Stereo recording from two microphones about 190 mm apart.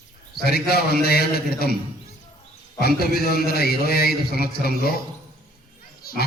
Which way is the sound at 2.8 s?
55° left (ahead or behind).